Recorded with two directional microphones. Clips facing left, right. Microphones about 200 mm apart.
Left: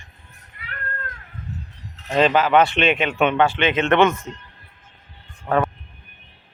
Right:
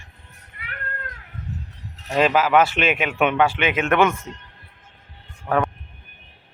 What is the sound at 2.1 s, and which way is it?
Speech, 5° right (ahead or behind).